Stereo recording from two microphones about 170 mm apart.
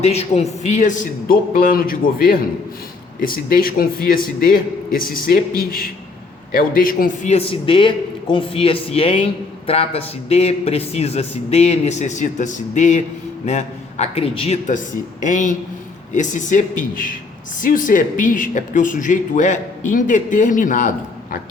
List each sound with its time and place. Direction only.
0.0 s a man's voice: 40° left (ahead or behind)